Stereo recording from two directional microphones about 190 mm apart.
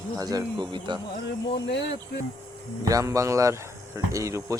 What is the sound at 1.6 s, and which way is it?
Speech, 65° left (ahead or behind).